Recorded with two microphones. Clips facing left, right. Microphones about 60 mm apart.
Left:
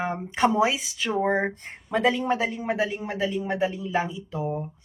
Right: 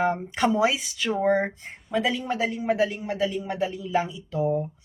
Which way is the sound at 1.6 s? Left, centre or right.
Left.